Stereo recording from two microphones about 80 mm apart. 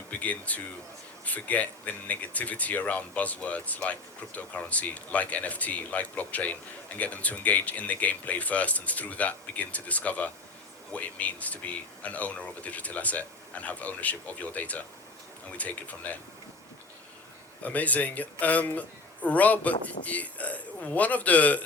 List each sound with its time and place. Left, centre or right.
0.1 s speech: centre
17.6 s speech: centre